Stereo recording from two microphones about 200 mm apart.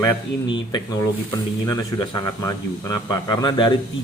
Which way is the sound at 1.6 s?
20° left (ahead or behind).